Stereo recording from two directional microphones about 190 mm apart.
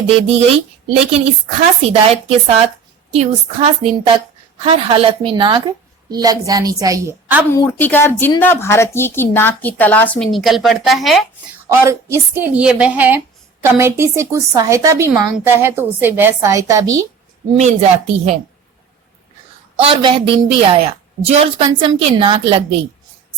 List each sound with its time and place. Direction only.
0.2 s a woman's voice: 30° right (ahead or behind)
1.8 s a woman's voice: 35° right (ahead or behind); by 7.4 s 10° right (ahead or behind)
7.5 s a woman's voice: 10° left (ahead or behind)
11.7 s a woman's voice: 15° right (ahead or behind)
17.5 s a woman's voice: 35° right (ahead or behind)
19.7 s a woman's voice: 30° right (ahead or behind)